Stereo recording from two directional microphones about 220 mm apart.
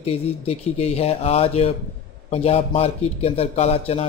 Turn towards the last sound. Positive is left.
turn(degrees=30)  # may be behind; listen again after turning